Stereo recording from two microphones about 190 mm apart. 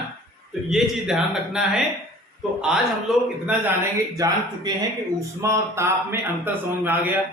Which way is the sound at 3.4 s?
15° right (ahead or behind).